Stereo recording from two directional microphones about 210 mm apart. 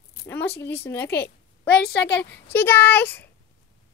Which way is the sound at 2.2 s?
10° left (ahead or behind).